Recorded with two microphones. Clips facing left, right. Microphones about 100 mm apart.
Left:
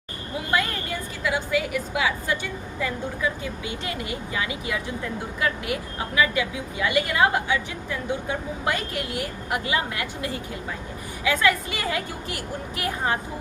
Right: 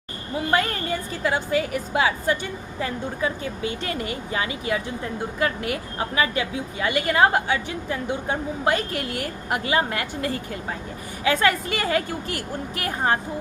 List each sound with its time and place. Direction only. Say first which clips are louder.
0.5 s a woman's voice: right 2 dB; 40° right (ahead or behind)
3.8 s a woman's voice: right 2 dB; 40° right (ahead or behind)